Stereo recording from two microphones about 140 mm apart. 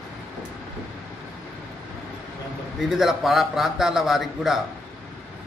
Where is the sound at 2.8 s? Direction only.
Centre (ahead or behind).